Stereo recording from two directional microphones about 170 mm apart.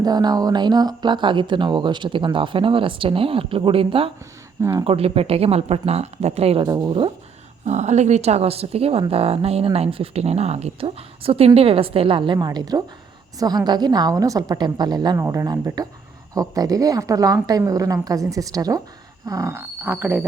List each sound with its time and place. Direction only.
0.0 s speech: 25° right (ahead or behind)
4.9 s speech: 35° right (ahead or behind)
6.7 s speech: 25° right (ahead or behind)
7.6 s speech: 40° right (ahead or behind); by 20.2 s 10° right (ahead or behind)